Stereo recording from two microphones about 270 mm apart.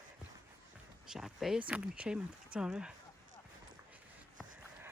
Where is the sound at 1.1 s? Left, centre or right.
Centre.